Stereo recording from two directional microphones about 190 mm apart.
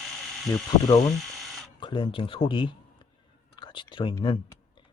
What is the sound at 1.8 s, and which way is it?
A man's voice, 25° left (ahead or behind).